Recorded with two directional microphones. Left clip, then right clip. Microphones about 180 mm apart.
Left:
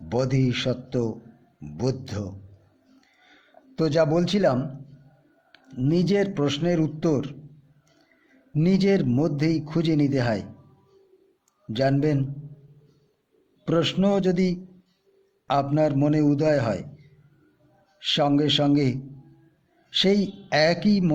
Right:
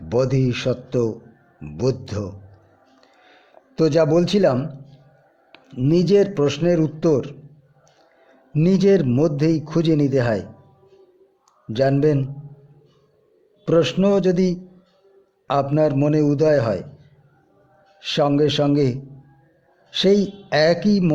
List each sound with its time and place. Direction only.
0.1 s speech: 15° right (ahead or behind)
3.8 s a man's voice: 20° right (ahead or behind)
8.5 s a man's voice: 20° right (ahead or behind)
11.7 s a man's voice: 20° right (ahead or behind)
13.7 s a man's voice: 15° right (ahead or behind)
18.0 s a man's voice: 20° right (ahead or behind)